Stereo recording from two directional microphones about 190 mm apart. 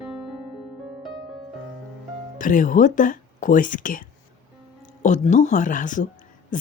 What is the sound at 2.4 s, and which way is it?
Speech, 45° left (ahead or behind).